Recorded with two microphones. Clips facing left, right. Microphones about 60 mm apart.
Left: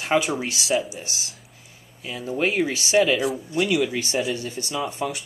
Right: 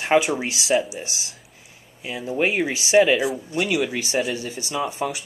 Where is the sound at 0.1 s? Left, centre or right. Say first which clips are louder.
Right 3 dB; centre.